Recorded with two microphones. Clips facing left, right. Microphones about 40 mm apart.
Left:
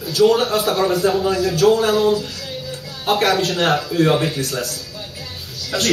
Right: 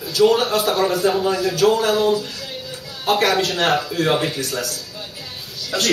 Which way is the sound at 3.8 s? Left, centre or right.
Centre.